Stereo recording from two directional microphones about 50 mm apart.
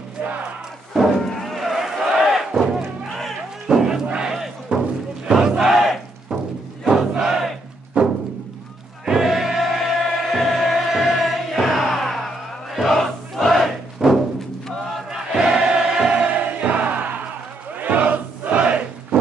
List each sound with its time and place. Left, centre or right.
1.3 s music: centre
3.6 s a sound: centre
4.7 s a sound: right
5.2 s crowd: centre
8.0 s music: right
9.0 s music: centre
12.7 s crowd: centre
13.9 s music: centre
15.3 s choir: centre
16.3 s music: right
17.7 s crowd: right